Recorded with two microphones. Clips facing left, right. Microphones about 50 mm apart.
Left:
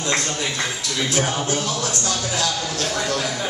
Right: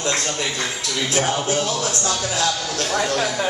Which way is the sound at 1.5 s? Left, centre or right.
Right.